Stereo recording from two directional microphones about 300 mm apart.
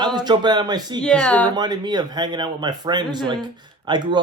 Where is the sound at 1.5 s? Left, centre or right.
Centre.